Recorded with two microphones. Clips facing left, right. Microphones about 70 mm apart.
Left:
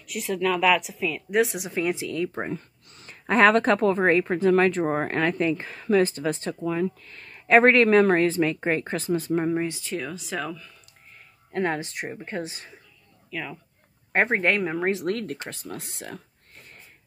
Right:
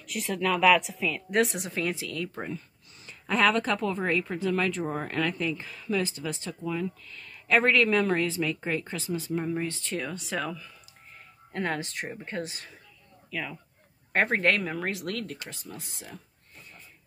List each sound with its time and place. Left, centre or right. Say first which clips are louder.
0.0 s a woman's voice: left 3 dB; centre
1.7 s speech: left 5 dB; centre; by 9.5 s left
9.7 s a woman's voice: left 2 dB; centre
11.5 s speech: left 4 dB; left
13.3 s speech: left 1 dB; centre
14.1 s speech: left 2 dB; centre; by 15.5 s left
15.5 s speech: left 6 dB; left